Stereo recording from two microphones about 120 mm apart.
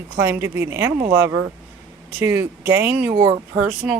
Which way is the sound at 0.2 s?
20° right (ahead or behind).